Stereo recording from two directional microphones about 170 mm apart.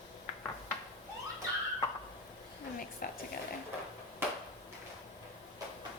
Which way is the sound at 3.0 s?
60° left (ahead or behind).